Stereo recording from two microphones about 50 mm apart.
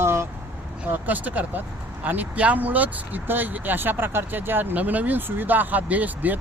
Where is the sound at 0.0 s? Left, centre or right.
Right.